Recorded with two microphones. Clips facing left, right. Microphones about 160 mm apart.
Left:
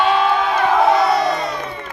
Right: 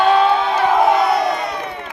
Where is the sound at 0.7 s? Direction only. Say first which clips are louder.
Even; 15° right (ahead or behind).